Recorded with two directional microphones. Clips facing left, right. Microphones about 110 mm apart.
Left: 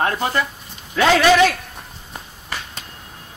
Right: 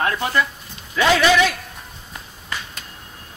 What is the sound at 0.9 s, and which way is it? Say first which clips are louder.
Speech: left 2 dB; 45° left (ahead or behind).